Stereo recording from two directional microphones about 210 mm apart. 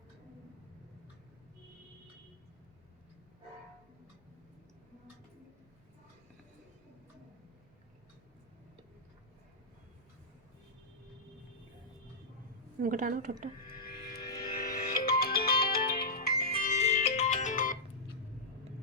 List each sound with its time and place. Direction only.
12.8 s a woman's voice: 40° right (ahead or behind)
13.8 s music: 45° left (ahead or behind)